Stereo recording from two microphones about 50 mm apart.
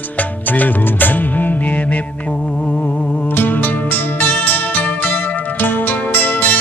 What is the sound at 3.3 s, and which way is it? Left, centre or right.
Music, left.